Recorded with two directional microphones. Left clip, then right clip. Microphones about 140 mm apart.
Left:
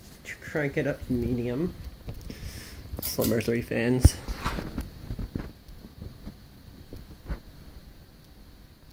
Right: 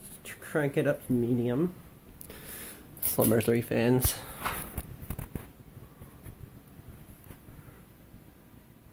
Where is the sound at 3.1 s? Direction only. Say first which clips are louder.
Right 1 dB; 25° right (ahead or behind).